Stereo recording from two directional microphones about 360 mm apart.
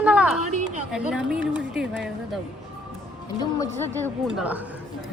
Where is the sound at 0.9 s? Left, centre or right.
Centre.